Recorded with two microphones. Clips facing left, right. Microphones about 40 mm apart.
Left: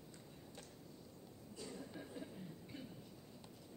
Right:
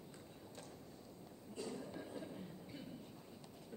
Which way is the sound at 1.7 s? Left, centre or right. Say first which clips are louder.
Right 3 dB; centre.